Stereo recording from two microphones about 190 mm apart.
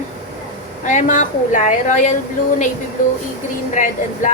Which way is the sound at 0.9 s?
40° left (ahead or behind).